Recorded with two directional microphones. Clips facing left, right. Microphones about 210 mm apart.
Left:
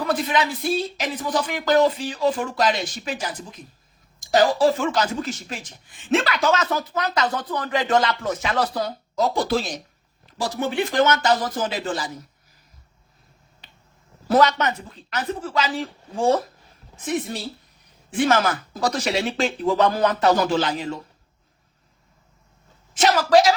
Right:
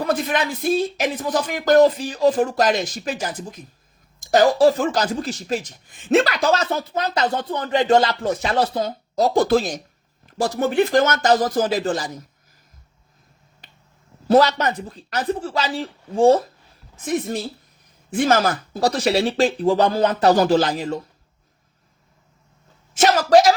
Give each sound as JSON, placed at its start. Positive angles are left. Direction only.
{"t": 0.0, "sound": "speech", "side_deg": -45}
{"t": 9.1, "sound": "speech", "side_deg": -40}
{"t": 14.3, "sound": "speech", "side_deg": -35}
{"t": 17.1, "sound": "speech", "side_deg": -45}
{"t": 23.0, "sound": "speech", "side_deg": -45}